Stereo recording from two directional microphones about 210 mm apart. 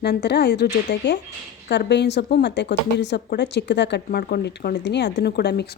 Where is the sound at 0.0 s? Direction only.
50° left (ahead or behind).